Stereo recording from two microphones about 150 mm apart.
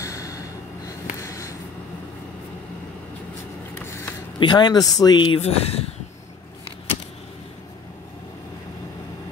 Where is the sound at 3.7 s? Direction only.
15° left (ahead or behind).